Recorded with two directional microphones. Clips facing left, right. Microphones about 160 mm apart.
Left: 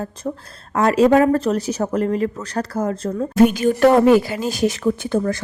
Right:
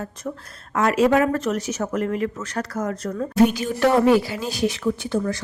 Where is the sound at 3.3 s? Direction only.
50° left (ahead or behind).